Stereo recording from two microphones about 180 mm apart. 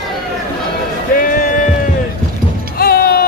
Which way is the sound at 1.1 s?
50° left (ahead or behind).